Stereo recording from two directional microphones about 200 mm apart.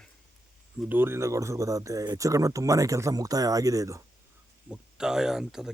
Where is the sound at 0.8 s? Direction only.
10° right (ahead or behind).